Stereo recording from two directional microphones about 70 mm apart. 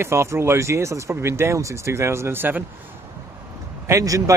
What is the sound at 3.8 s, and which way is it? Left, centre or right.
Speech, right.